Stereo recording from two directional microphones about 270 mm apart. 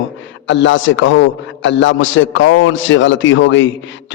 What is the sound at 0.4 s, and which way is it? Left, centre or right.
A man's voice, left.